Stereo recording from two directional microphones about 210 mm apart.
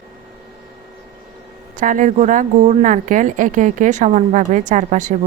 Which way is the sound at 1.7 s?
40° right (ahead or behind).